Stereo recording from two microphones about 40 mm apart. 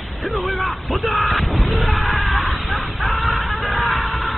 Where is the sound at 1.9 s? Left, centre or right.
Centre.